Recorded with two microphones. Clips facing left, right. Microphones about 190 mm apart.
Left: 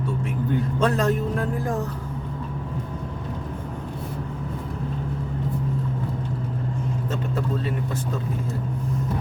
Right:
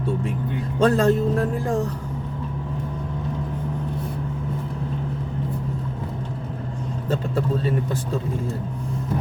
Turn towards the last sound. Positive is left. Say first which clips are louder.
# right 3 dB
turn(degrees=-35)  # may be behind; listen again after turning